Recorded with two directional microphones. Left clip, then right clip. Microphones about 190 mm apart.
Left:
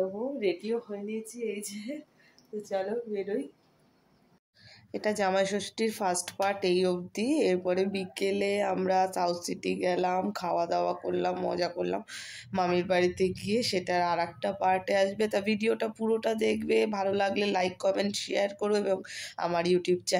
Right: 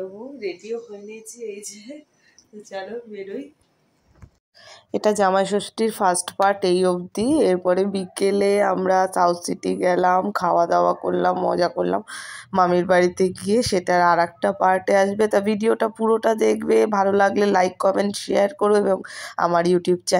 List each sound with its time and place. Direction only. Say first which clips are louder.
2.7 s speech: even; 10° left (ahead or behind)
4.9 s speech: right 9 dB; 35° right (ahead or behind)